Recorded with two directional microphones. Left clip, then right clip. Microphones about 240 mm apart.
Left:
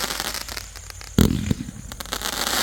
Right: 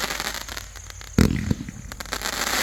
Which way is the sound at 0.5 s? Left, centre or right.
Left.